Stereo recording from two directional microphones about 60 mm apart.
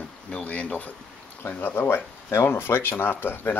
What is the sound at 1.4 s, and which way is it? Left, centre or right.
Speech, left.